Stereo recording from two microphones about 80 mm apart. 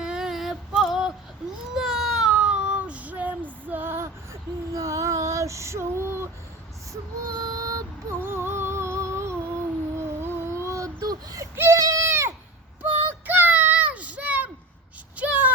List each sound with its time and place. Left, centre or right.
0.0 s female singing: centre
0.8 s a sound: centre
1.7 s child singing: centre; by 6.2 s right
7.3 s child singing: right
8.2 s music: right
10.0 s a sound: right
11.5 s goat: right
12.8 s child singing: right
15.1 s a sound: centre